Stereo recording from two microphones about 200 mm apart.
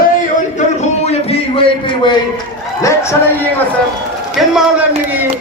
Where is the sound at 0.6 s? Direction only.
35° left (ahead or behind); by 3.1 s 15° left (ahead or behind).